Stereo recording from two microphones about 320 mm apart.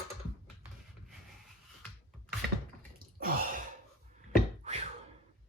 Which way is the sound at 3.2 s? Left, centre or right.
Right.